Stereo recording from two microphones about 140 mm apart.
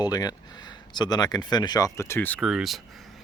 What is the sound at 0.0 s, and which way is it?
Speech, 30° left (ahead or behind).